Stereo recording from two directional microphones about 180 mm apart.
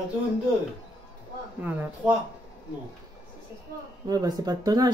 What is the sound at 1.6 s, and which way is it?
Speech, 10° right (ahead or behind).